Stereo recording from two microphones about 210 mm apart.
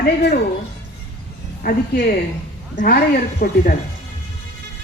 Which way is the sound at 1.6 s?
45° left (ahead or behind).